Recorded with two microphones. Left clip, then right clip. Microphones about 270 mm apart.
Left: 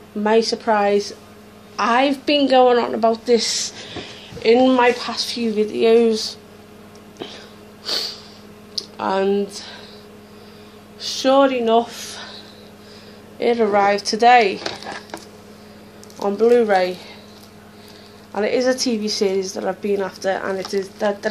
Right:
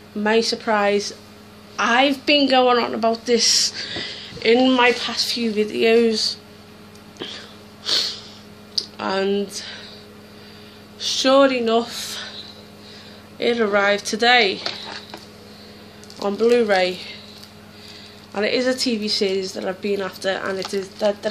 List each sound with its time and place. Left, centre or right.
0.2 s a woman's voice: centre
4.5 s a woman's voice: centre
7.2 s a sound: centre
8.7 s speech: centre
11.0 s speech: centre
13.4 s a woman's voice: centre
16.2 s a woman's voice: centre
18.3 s a woman's voice: centre